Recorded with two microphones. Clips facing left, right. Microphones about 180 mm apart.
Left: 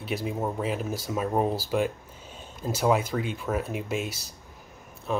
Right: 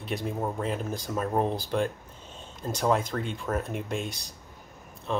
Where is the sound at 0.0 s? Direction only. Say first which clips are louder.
Left 1 dB; 5° left (ahead or behind).